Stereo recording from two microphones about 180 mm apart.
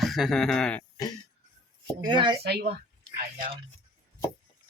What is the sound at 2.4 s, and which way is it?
Speech, 65° right (ahead or behind).